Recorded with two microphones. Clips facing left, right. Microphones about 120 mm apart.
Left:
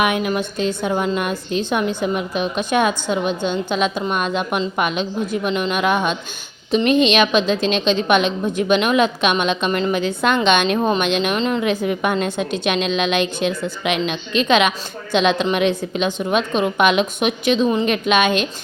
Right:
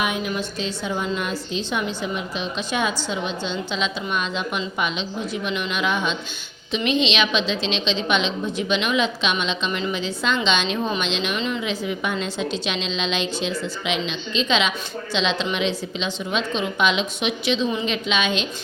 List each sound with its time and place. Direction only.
0.0 s a woman's voice: 60° left (ahead or behind)